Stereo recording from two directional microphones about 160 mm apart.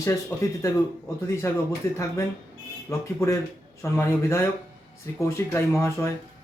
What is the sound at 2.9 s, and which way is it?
A man's voice, 20° left (ahead or behind).